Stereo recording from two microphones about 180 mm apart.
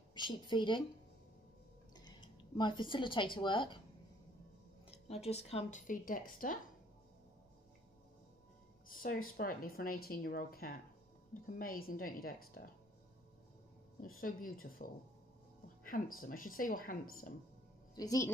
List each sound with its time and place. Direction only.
0.1 s speech: 25° left (ahead or behind)
2.0 s speech: 25° left (ahead or behind)
4.8 s speech: 35° left (ahead or behind)
8.8 s speech: 50° left (ahead or behind)
14.0 s speech: 50° left (ahead or behind)
17.9 s speech: 20° left (ahead or behind)